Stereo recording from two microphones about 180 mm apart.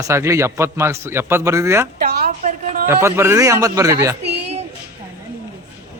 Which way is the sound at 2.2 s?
50° right (ahead or behind).